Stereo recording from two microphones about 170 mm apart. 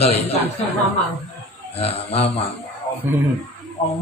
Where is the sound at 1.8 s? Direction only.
35° left (ahead or behind).